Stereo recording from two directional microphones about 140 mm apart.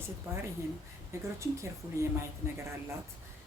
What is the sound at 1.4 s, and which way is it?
Speech, 20° right (ahead or behind).